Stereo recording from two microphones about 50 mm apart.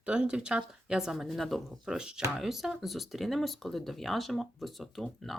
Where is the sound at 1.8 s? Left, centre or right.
Centre.